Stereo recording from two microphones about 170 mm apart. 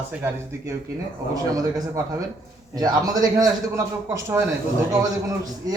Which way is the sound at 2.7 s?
25° right (ahead or behind).